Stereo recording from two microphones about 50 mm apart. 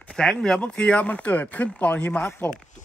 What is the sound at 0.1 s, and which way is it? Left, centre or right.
Speech, centre.